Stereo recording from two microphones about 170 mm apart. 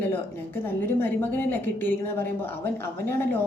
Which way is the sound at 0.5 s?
10° left (ahead or behind).